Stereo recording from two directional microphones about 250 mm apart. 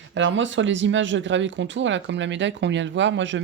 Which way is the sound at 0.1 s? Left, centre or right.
Right.